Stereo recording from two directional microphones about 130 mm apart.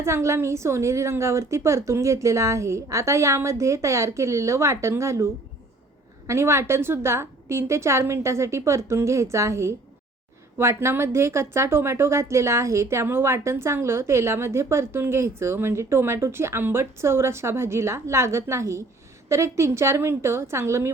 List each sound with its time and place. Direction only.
0.0 s a woman's voice: 20° right (ahead or behind)